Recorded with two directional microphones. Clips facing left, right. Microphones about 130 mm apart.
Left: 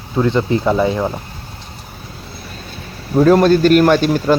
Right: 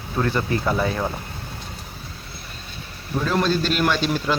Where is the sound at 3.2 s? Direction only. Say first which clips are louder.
Left 12 dB; 45° left (ahead or behind).